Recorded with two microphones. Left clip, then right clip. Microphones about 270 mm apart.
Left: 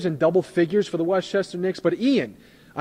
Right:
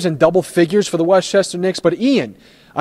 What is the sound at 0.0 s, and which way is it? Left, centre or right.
Speech, right.